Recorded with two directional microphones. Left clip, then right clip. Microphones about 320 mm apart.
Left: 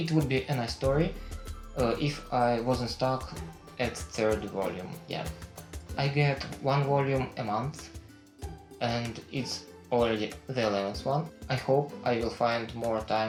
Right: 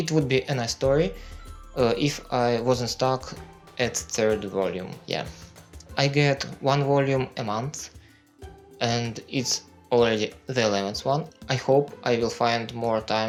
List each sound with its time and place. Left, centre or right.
0.0 s speech: right
6.0 s speech: right
8.8 s speech: right